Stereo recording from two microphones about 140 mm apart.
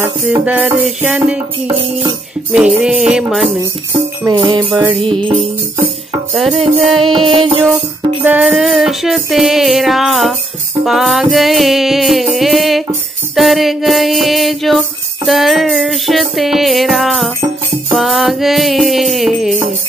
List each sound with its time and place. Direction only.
0.0 s music: 15° right (ahead or behind)
2.5 s music: 5° right (ahead or behind)
4.3 s music: 30° right (ahead or behind)
6.8 s music: centre (ahead or behind)
7.1 s music: 35° right (ahead or behind)
8.2 s music: 10° right (ahead or behind)
17.4 s music: 20° right (ahead or behind)
17.9 s music: centre (ahead or behind)